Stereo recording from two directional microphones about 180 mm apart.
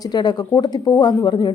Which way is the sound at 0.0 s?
25° left (ahead or behind).